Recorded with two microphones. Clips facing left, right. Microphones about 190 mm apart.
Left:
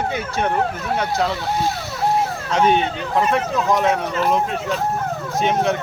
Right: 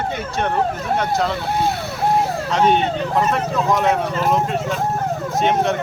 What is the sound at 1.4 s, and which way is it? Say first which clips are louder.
Speech: right 1 dB; 55° right (ahead or behind).